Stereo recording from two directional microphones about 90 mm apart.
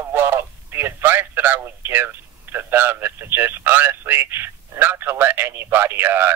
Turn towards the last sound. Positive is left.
turn(degrees=-20)  # may be behind; listen again after turning